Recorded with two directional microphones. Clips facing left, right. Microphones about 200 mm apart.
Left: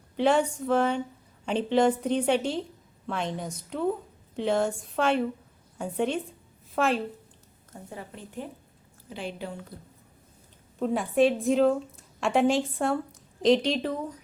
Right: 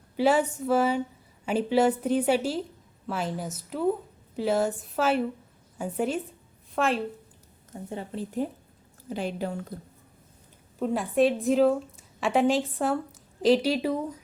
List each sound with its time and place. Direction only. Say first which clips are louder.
0.2 s a woman's voice: even; 5° right (ahead or behind)
7.7 s speech: right 6 dB; 25° right (ahead or behind)
8.4 s a woman's voice: right 9 dB; 40° right (ahead or behind)
10.8 s a woman's voice: even; centre (ahead or behind)